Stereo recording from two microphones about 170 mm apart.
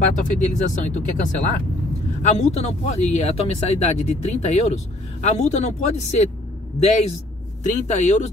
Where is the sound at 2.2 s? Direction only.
40° left (ahead or behind).